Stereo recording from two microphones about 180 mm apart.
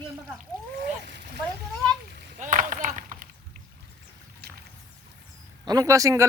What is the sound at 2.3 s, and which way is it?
Chop, 45° right (ahead or behind).